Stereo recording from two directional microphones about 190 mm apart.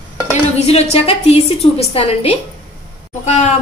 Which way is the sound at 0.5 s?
35° left (ahead or behind).